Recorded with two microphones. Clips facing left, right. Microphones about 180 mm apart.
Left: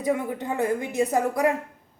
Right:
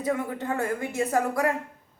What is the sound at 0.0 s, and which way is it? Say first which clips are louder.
A woman's voice: left 2 dB; 15° left (ahead or behind).